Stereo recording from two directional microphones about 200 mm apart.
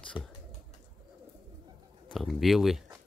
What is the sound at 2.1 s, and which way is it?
Speech, centre (ahead or behind).